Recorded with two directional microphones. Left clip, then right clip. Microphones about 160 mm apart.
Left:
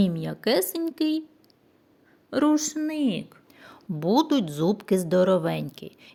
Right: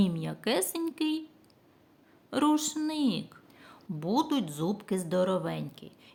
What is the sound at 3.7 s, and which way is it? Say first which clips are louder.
A woman's voice: left 7 dB; 35° left (ahead or behind).